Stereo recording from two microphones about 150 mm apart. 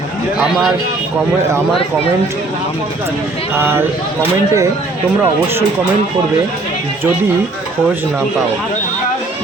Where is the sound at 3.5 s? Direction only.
15° right (ahead or behind).